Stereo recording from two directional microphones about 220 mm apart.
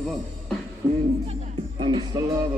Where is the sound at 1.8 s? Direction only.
20° right (ahead or behind).